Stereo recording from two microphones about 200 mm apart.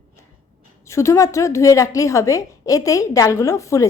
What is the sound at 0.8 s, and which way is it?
A woman's voice, 15° left (ahead or behind).